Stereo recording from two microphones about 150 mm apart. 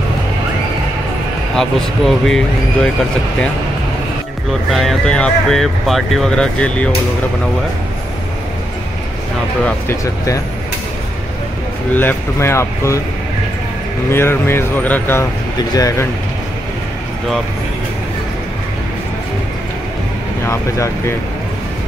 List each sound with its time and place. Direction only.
1.5 s speech: 5° left (ahead or behind)
4.7 s speech: 5° left (ahead or behind)
9.7 s speech: 20° left (ahead or behind)
11.9 s speech: 15° left (ahead or behind)
14.1 s speech: 15° left (ahead or behind)
15.7 s speech: 25° left (ahead or behind)
20.4 s speech: 20° left (ahead or behind)